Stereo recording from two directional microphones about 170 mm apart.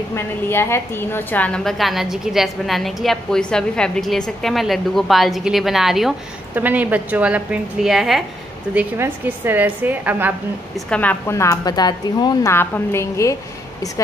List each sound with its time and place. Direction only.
0.1 s a woman's voice: 15° left (ahead or behind); by 8.2 s 5° right (ahead or behind)
8.7 s a woman's voice: 15° right (ahead or behind)
10.9 s a woman's voice: 10° left (ahead or behind)